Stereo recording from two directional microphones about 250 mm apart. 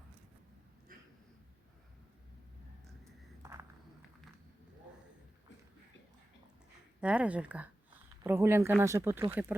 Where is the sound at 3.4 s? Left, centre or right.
Centre.